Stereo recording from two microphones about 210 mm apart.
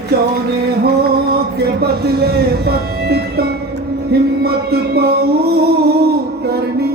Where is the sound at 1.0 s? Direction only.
50° right (ahead or behind).